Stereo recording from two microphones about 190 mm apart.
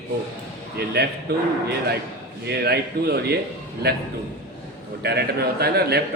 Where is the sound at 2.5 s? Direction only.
55° right (ahead or behind).